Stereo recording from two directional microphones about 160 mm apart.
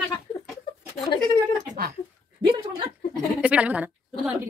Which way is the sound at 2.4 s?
30° right (ahead or behind).